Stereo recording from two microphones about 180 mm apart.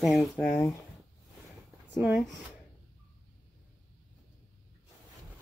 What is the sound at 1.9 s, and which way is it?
Speech, 5° right (ahead or behind).